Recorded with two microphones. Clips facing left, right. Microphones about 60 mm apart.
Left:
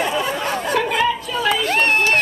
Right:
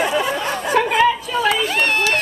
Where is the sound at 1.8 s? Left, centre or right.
Left.